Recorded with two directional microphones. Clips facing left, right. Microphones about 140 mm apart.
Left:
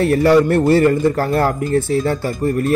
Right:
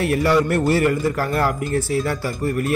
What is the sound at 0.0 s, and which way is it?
Speech, 30° left (ahead or behind).